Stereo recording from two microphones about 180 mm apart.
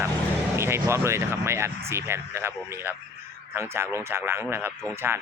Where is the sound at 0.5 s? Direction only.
15° right (ahead or behind).